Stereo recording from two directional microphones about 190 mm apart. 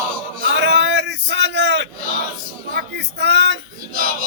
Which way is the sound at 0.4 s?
65° right (ahead or behind).